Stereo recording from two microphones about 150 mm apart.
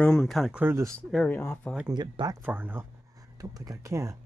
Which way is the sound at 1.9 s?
30° right (ahead or behind).